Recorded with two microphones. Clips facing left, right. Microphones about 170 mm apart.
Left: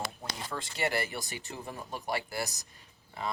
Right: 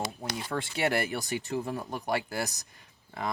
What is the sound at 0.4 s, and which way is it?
Speech, 65° right (ahead or behind).